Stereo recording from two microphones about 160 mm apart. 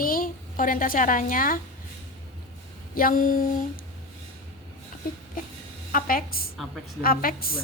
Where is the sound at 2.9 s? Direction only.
60° left (ahead or behind).